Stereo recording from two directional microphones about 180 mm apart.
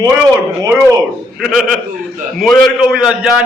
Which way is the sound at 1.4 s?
Centre (ahead or behind).